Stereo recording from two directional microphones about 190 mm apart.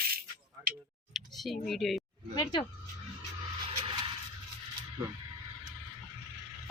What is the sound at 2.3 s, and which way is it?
Speech, 20° left (ahead or behind).